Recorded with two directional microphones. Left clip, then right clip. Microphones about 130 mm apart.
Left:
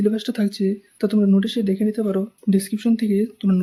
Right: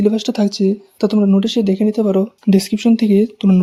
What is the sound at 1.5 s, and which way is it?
Speech, 35° right (ahead or behind).